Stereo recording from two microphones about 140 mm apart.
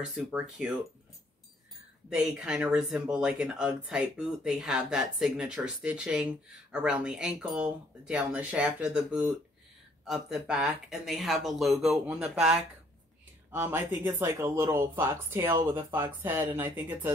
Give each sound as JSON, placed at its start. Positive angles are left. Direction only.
{"t": 0.0, "sound": "speech", "side_deg": -5}
{"t": 2.1, "sound": "speech", "side_deg": -5}
{"t": 13.5, "sound": "speech", "side_deg": -15}